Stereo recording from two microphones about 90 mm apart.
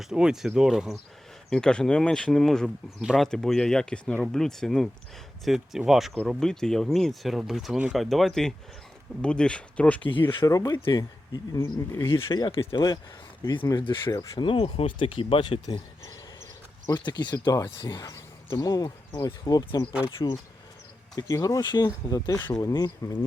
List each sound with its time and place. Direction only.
0.0 s speech: 5° right (ahead or behind)
1.5 s speech: 10° left (ahead or behind)
3.2 s speech: 5° left (ahead or behind)
10.1 s speech: 75° left (ahead or behind)
10.4 s speech: 40° left (ahead or behind)
12.5 s speech: 90° left
13.7 s speech: 60° left (ahead or behind)
14.3 s speech: 80° left
17.1 s speech: 55° left (ahead or behind)
21.2 s speech: 40° left (ahead or behind)
21.6 s speech: 50° left (ahead or behind)